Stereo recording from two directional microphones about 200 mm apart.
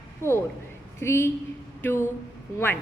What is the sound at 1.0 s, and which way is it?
A woman's voice, 15° left (ahead or behind).